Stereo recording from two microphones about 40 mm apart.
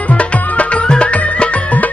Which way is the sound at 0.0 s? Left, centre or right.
Left.